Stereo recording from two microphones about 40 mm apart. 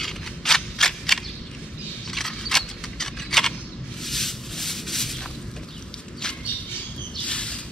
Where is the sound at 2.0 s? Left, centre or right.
Centre.